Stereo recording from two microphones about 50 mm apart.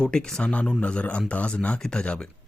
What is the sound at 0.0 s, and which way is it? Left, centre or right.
Speech, centre.